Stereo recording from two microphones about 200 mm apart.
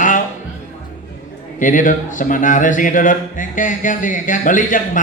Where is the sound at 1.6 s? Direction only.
40° left (ahead or behind).